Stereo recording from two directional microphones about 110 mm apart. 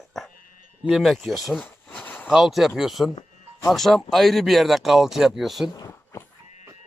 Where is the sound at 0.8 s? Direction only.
Centre (ahead or behind).